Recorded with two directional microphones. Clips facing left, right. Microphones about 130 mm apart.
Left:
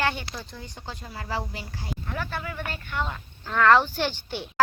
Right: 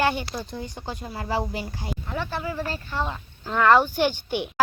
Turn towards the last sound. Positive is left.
turn(degrees=-15)  # may be behind; listen again after turning